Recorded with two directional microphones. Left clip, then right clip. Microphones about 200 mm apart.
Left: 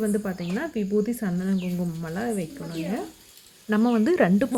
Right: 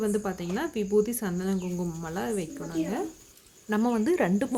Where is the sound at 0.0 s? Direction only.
Centre (ahead or behind).